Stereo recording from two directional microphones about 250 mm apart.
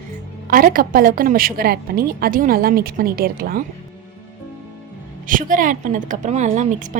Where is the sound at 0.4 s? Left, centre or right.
Right.